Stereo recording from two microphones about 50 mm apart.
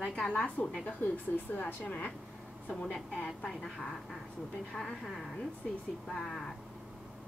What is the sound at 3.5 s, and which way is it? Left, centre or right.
A woman's voice, centre.